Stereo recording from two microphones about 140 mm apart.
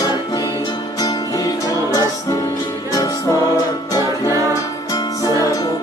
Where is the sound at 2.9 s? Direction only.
25° left (ahead or behind).